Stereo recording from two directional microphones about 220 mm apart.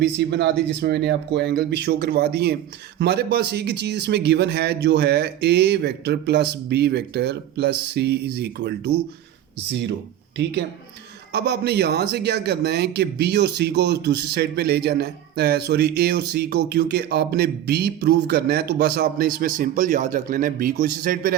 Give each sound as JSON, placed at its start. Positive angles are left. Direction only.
{"t": 0.0, "sound": "a man's voice", "side_deg": -50}